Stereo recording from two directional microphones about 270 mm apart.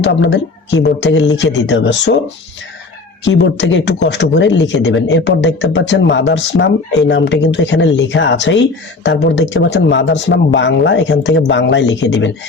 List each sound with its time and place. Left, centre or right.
0.0 s speech: left
3.2 s speech: left